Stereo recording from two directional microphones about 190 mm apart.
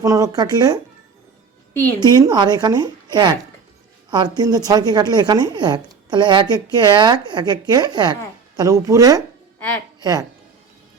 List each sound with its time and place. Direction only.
0.0 s a woman's voice: 20° right (ahead or behind)
1.7 s a woman's voice: 10° left (ahead or behind)
2.0 s a woman's voice: 20° right (ahead or behind)
4.1 s a woman's voice: 20° right (ahead or behind)
9.6 s a woman's voice: 10° left (ahead or behind)
10.0 s a woman's voice: 20° right (ahead or behind)